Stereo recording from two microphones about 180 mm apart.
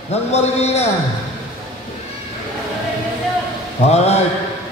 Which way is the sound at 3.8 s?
35° left (ahead or behind).